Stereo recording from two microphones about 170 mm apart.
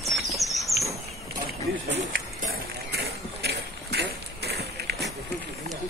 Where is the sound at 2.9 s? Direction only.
75° right (ahead or behind).